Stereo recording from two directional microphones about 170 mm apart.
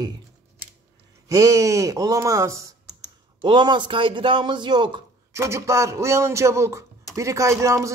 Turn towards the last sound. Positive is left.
turn(degrees=-15)  # may be behind; listen again after turning